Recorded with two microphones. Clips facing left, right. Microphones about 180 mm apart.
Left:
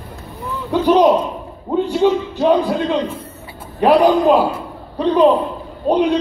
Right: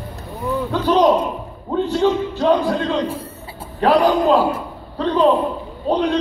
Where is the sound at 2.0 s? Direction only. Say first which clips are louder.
Left 3 dB; 15° left (ahead or behind).